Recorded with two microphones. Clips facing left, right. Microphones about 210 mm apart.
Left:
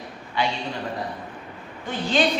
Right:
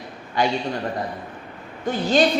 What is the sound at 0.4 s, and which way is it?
Speech, 45° right (ahead or behind).